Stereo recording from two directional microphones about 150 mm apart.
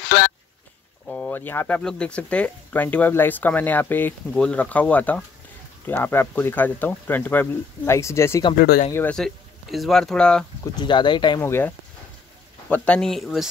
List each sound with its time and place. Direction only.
1.0 s speech: 10° left (ahead or behind)
8.5 s speech: 90° left
8.9 s speech: 10° left (ahead or behind)
10.6 s speech: 30° left (ahead or behind)
11.4 s speech: 15° left (ahead or behind); by 13.5 s centre (ahead or behind)